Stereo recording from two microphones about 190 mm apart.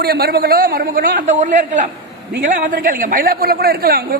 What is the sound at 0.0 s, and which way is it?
A woman's voice, 55° right (ahead or behind).